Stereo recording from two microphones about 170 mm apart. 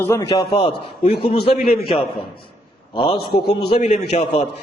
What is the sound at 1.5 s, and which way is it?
Speech, 60° left (ahead or behind).